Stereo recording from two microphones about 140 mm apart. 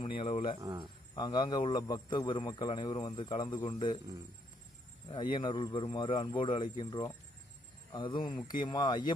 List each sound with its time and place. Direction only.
0.0 s speech: 40° left (ahead or behind)
0.6 s speech: 30° right (ahead or behind)
1.1 s a man's voice: 30° left (ahead or behind)
5.0 s a man's voice: 35° left (ahead or behind)